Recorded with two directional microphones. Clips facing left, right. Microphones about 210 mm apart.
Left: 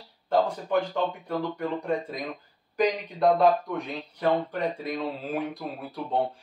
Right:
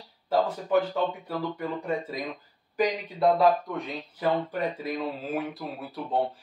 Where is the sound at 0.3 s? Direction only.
5° right (ahead or behind).